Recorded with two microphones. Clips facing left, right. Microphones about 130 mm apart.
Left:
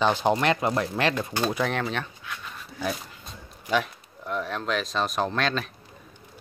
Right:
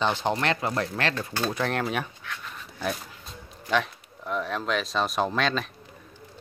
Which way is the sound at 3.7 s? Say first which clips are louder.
Even; centre (ahead or behind).